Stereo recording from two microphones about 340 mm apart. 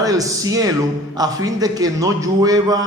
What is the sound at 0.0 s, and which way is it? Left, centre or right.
A man's voice, centre.